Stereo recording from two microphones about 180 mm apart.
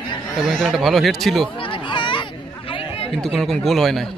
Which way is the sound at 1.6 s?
25° left (ahead or behind).